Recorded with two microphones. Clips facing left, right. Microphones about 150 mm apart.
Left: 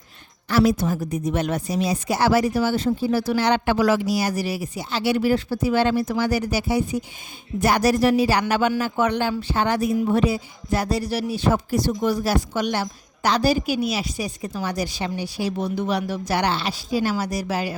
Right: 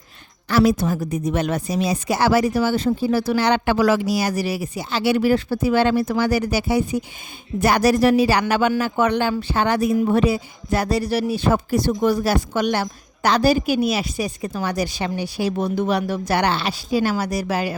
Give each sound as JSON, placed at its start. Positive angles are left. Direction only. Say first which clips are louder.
{"t": 0.4, "sound": "a woman's voice", "louder": "right 2 dB", "side_deg": -85}